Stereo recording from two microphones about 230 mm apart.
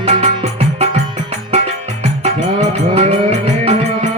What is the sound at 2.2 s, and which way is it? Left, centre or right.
Music, right.